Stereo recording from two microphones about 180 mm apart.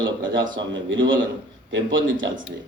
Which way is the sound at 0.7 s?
90° right.